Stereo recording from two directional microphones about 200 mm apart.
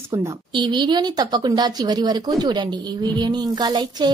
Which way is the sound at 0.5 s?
20° right (ahead or behind).